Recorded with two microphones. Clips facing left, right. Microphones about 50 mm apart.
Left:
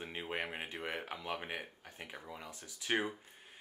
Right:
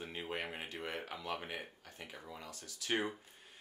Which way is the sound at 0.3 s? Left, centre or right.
Centre.